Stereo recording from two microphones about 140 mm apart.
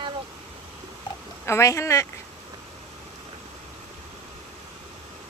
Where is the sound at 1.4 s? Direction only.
20° left (ahead or behind).